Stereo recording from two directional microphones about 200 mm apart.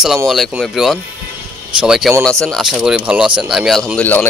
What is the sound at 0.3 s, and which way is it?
Speech, centre (ahead or behind).